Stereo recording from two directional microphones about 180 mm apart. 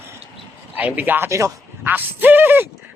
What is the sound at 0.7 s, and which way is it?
Speech, 10° right (ahead or behind).